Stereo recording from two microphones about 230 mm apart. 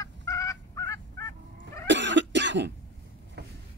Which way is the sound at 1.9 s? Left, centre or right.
Right.